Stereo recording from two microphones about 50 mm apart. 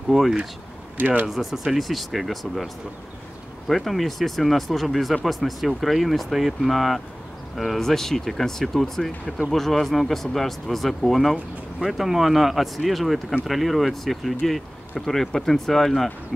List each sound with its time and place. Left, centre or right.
0.1 s speech: centre
0.9 s speech: right
1.3 s speech: centre